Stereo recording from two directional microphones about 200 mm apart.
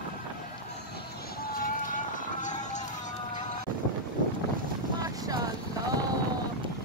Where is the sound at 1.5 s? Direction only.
45° left (ahead or behind).